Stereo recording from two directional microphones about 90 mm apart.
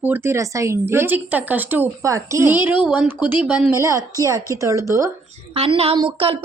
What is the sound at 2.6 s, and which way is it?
Speech, 15° right (ahead or behind).